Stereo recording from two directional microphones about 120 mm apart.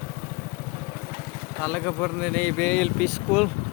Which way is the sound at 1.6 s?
15° left (ahead or behind).